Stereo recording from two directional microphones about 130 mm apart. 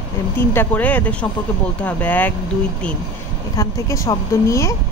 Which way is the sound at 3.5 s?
25° left (ahead or behind).